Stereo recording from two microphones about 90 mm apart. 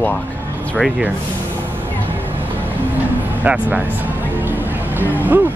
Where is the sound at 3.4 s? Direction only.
15° right (ahead or behind).